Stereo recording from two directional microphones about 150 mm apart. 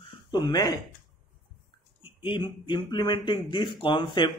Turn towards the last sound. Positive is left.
turn(degrees=30)  # may be behind; listen again after turning